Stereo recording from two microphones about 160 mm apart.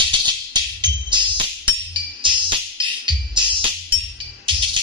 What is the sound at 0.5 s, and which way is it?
Music, 25° right (ahead or behind).